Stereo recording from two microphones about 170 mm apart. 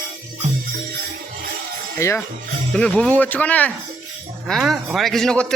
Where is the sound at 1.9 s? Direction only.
15° left (ahead or behind).